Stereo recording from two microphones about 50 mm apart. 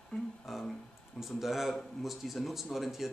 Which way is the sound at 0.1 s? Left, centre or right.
Left.